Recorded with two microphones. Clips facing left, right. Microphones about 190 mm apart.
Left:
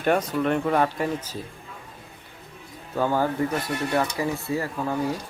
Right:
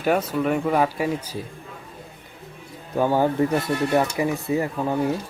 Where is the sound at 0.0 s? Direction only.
5° right (ahead or behind).